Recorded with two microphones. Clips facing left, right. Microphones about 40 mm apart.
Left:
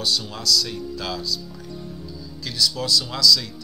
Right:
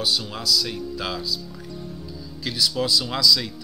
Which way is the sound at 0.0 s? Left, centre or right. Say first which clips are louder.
Even; centre.